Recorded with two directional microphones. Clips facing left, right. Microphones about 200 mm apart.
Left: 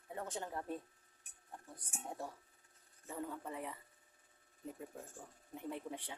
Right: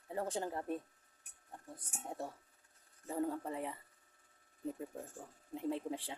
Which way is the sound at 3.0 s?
35° right (ahead or behind).